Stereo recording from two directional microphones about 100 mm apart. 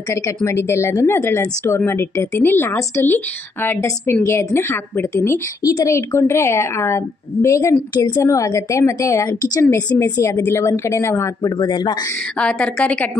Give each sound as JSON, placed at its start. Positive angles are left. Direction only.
{"t": 0.1, "sound": "a woman's voice", "side_deg": 30}
{"t": 5.6, "sound": "a woman's voice", "side_deg": 35}
{"t": 7.9, "sound": "speech", "side_deg": 45}
{"t": 8.2, "sound": "a woman's voice", "side_deg": 30}
{"t": 10.3, "sound": "a woman's voice", "side_deg": 20}
{"t": 10.6, "sound": "a woman's voice", "side_deg": 30}
{"t": 11.5, "sound": "speech", "side_deg": 45}
{"t": 12.4, "sound": "a woman's voice", "side_deg": 10}